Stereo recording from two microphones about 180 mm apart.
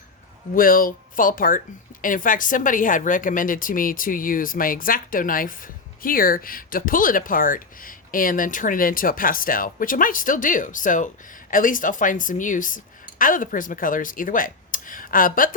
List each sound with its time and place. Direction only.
0.5 s speech: 50° left (ahead or behind)